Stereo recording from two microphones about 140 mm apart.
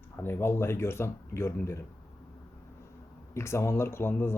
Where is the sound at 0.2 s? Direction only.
15° left (ahead or behind).